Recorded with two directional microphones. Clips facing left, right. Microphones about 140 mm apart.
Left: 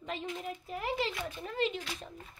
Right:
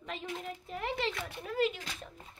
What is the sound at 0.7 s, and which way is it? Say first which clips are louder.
Speech: even; 5° left (ahead or behind).